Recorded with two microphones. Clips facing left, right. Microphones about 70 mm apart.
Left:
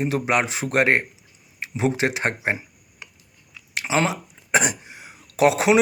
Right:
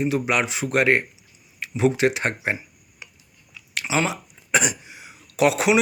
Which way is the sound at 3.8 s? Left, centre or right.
Left.